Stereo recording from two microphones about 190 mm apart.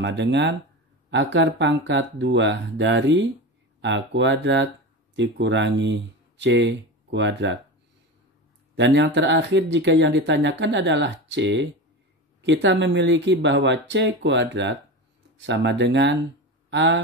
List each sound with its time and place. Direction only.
0.0 s speech: 70° right (ahead or behind)
8.7 s speech: 70° right (ahead or behind)